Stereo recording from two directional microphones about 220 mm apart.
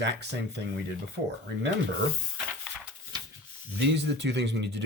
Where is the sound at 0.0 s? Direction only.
50° right (ahead or behind).